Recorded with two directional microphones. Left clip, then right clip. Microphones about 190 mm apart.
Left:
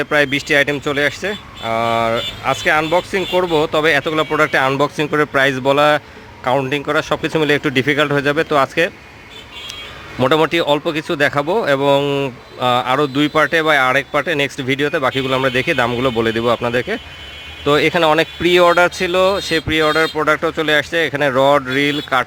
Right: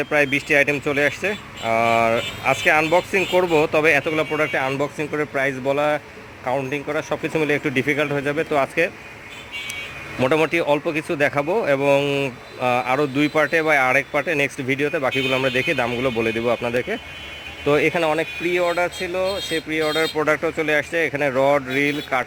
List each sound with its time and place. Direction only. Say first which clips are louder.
0.0 s speech: left 4 dB; 10° left (ahead or behind)
10.2 s speech: left 4 dB; 10° left (ahead or behind)
20.1 s speech: left 4 dB; 5° left (ahead or behind)